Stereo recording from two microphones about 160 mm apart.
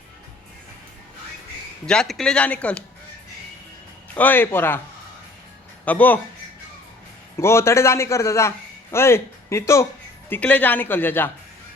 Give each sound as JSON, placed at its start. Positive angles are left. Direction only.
{"t": 1.9, "sound": "a man's voice", "side_deg": 5}
{"t": 4.1, "sound": "a man's voice", "side_deg": 10}
{"t": 5.8, "sound": "a man's voice", "side_deg": 10}
{"t": 7.3, "sound": "a man's voice", "side_deg": 15}